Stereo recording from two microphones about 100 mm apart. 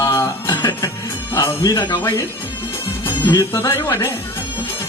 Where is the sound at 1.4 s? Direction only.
35° left (ahead or behind).